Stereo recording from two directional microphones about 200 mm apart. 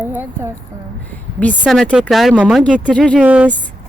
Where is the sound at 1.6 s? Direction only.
Centre (ahead or behind).